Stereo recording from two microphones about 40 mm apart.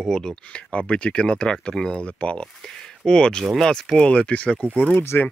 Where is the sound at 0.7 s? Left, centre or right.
Left.